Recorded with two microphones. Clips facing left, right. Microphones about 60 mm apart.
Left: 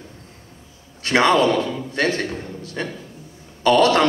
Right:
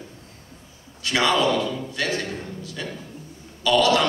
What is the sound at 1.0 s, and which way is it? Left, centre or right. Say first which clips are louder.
A man's voice: left 5 dB; left.